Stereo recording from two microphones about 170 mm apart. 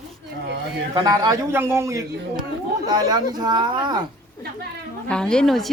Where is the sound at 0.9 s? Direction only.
20° right (ahead or behind).